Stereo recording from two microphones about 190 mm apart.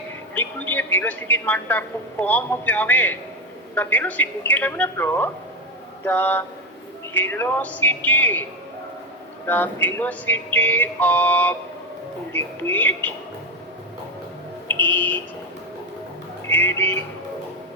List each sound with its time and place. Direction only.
0.3 s speech: 10° left (ahead or behind)
9.5 s speech: 10° left (ahead or behind)
14.9 s speech: 10° left (ahead or behind)
16.5 s speech: 10° left (ahead or behind)